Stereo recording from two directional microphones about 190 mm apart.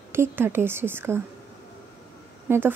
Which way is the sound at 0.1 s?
10° right (ahead or behind).